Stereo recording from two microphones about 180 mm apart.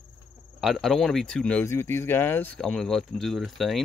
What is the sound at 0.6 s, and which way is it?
Speech, centre (ahead or behind).